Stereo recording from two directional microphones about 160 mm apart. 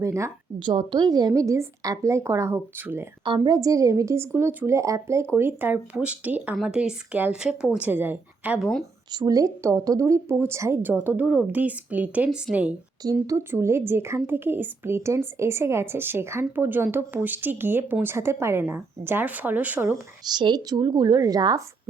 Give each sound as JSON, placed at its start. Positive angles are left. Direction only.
{"t": 0.0, "sound": "a woman's voice", "side_deg": -20}
{"t": 0.7, "sound": "a woman's voice", "side_deg": -30}
{"t": 3.2, "sound": "a woman's voice", "side_deg": -30}
{"t": 9.1, "sound": "a woman's voice", "side_deg": -20}
{"t": 13.0, "sound": "speech", "side_deg": -20}
{"t": 20.2, "sound": "a woman's voice", "side_deg": -25}